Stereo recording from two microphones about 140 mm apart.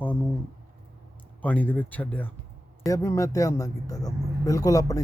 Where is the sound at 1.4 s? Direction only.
10° left (ahead or behind).